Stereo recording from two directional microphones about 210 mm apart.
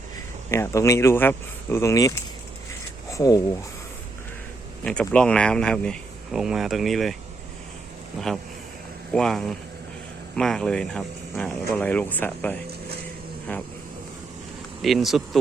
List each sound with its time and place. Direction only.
0.5 s speech: 15° left (ahead or behind)
4.8 s speech: 5° left (ahead or behind)
9.1 s speech: centre (ahead or behind)
14.8 s speech: centre (ahead or behind)